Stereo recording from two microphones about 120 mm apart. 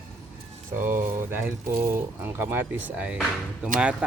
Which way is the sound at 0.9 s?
20° right (ahead or behind).